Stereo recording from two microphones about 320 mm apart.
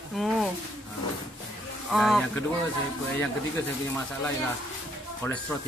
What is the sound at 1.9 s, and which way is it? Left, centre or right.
Speech, centre.